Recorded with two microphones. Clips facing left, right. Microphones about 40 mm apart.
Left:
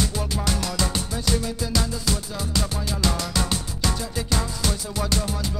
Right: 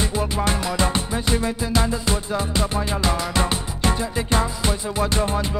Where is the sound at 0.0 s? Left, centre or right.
Right.